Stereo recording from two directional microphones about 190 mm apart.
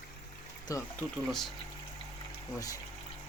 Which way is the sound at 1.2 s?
Centre (ahead or behind).